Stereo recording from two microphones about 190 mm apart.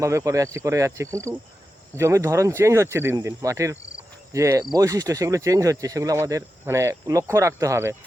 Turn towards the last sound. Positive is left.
turn(degrees=-15)  # may be behind; listen again after turning